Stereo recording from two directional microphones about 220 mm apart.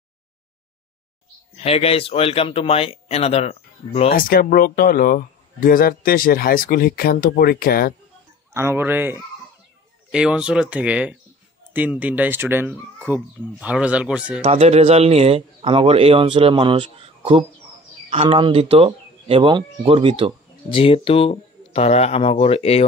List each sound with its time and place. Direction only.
1.5 s speech: 25° left (ahead or behind)
4.1 s speech: 40° left (ahead or behind)
8.5 s speech: 10° right (ahead or behind)
14.4 s speech: 25° right (ahead or behind)
20.7 s speech: 25° left (ahead or behind)